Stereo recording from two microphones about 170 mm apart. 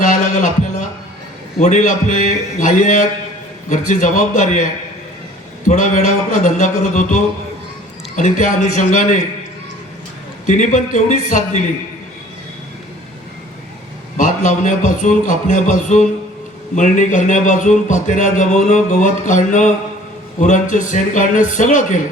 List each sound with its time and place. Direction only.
0.0 s a sound: 45° left (ahead or behind)
1.5 s a man's voice: 45° left (ahead or behind)
5.6 s a man's voice: 50° left (ahead or behind)
10.4 s a man's voice: 45° left (ahead or behind)
14.2 s a man's voice: 45° left (ahead or behind)